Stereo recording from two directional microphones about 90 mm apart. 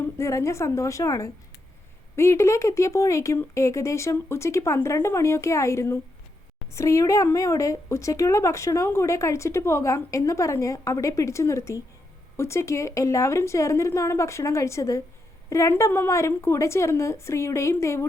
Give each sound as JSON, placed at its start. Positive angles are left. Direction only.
{"t": 0.0, "sound": "a woman's voice", "side_deg": 30}